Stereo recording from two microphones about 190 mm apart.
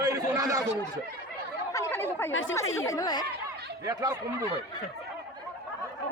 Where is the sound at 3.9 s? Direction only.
20° right (ahead or behind).